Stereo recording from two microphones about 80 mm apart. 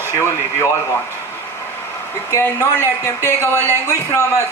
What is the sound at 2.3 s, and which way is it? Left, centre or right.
Speech, left.